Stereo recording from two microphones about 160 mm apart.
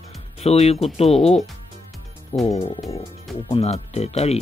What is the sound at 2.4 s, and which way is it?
Speech, 40° left (ahead or behind).